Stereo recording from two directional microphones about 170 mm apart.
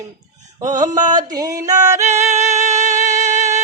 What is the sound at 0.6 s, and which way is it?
Mantra, 20° right (ahead or behind).